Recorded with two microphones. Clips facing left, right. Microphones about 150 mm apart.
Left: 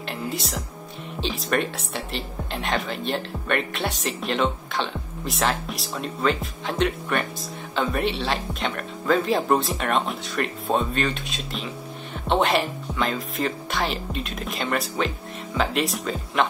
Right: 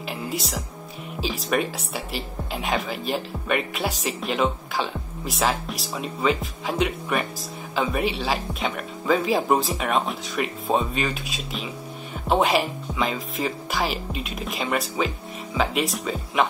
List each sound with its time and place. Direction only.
0.3 s speech: centre (ahead or behind)